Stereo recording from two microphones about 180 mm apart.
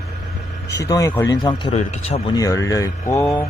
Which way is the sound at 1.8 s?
35° left (ahead or behind).